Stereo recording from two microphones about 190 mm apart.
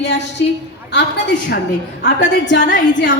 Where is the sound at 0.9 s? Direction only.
65° left (ahead or behind).